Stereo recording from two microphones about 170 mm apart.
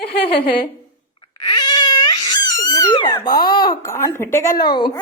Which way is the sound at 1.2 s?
30° left (ahead or behind).